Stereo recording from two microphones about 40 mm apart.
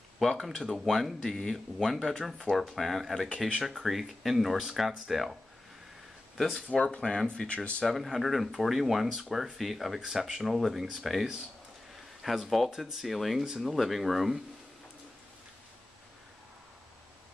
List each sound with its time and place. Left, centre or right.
0.2 s speech: centre
2.5 s speech: centre
6.3 s speech: centre
6.7 s speech: left
7.2 s speech: left
7.8 s speech: centre
12.4 s speech: centre
12.7 s speech: centre
13.1 s speech: centre